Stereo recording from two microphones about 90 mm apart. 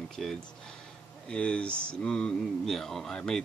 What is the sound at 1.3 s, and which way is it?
Speech, 10° left (ahead or behind).